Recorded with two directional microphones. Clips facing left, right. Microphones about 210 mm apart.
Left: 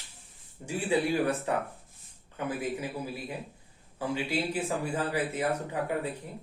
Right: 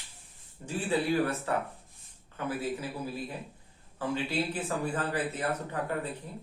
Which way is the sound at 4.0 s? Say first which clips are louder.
Even; 10° left (ahead or behind).